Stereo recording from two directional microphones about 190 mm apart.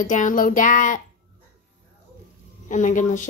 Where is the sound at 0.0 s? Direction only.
40° left (ahead or behind).